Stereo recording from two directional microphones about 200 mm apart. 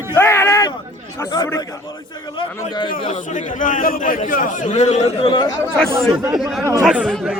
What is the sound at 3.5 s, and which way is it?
A man's voice, 40° left (ahead or behind).